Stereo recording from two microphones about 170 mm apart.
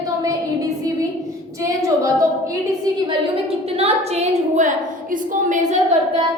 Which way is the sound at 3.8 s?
40° right (ahead or behind).